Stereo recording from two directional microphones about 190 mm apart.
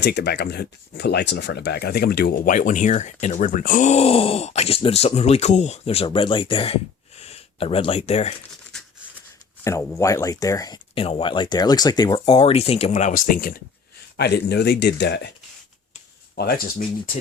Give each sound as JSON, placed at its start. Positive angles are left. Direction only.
{"t": 0.0, "sound": "speech", "side_deg": 60}
{"t": 9.6, "sound": "speech", "side_deg": 15}
{"t": 10.9, "sound": "speech", "side_deg": 30}
{"t": 14.2, "sound": "speech", "side_deg": 60}
{"t": 16.4, "sound": "speech", "side_deg": 55}